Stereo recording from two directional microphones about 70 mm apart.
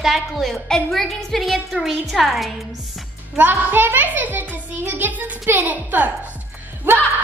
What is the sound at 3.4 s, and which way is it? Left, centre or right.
A child's voice, right.